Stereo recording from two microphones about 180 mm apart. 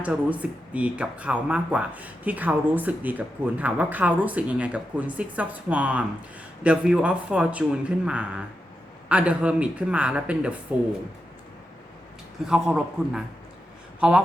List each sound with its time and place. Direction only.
0.0 s speech: 10° right (ahead or behind)
12.5 s a man's voice: 5° right (ahead or behind)